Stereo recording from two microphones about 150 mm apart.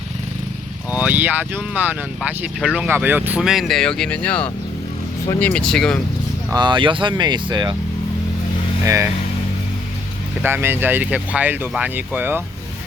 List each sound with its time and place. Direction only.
0.9 s speech: 10° right (ahead or behind); by 6.0 s 5° left (ahead or behind)
6.5 s speech: 30° right (ahead or behind)
8.8 s speech: 20° right (ahead or behind)
10.4 s speech: 15° right (ahead or behind)